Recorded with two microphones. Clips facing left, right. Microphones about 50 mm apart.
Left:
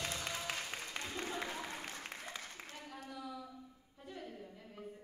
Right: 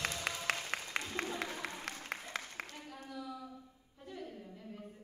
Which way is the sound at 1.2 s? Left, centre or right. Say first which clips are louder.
Right 3 dB; right.